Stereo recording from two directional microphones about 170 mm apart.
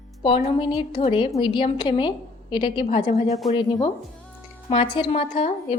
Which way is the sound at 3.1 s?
40° left (ahead or behind).